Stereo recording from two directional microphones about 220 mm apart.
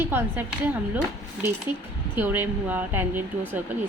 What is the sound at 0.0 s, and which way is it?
Speech, 10° right (ahead or behind).